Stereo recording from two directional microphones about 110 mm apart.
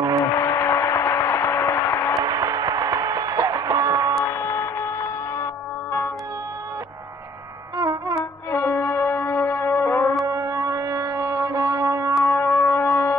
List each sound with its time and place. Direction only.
0.2 s a sound: 25° left (ahead or behind)
2.2 s music: 35° right (ahead or behind)
4.3 s music: 25° left (ahead or behind)
7.7 s music: 30° right (ahead or behind)
8.2 s music: 20° left (ahead or behind)
10.2 s music: 30° right (ahead or behind)
12.3 s a sound: 25° left (ahead or behind)